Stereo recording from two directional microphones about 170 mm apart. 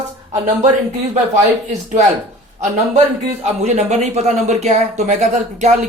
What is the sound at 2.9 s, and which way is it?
Speech, 40° right (ahead or behind).